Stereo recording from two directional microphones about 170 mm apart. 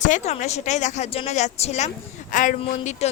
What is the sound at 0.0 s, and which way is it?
A woman's voice, 45° left (ahead or behind).